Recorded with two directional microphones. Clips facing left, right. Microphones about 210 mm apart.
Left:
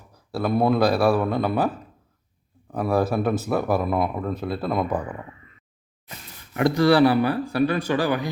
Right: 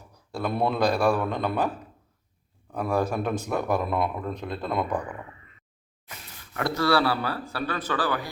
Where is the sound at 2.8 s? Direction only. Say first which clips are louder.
Left 4 dB; 5° left (ahead or behind).